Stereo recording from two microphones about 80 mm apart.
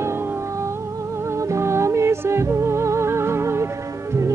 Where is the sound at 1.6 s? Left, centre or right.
Right.